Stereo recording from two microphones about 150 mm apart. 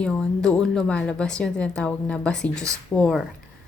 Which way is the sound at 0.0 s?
5° left (ahead or behind).